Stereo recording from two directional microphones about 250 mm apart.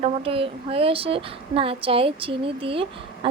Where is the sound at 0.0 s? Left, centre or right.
Right.